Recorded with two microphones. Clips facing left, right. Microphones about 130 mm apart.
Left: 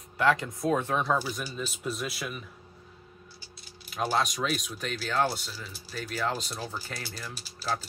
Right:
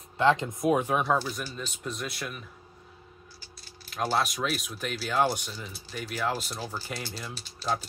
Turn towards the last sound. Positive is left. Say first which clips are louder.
# right 2 dB
turn(degrees=5)  # may be behind; listen again after turning